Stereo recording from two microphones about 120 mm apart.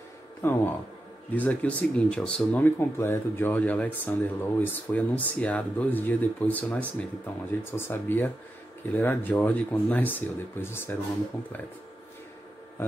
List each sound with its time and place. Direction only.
0.4 s speech: 20° left (ahead or behind)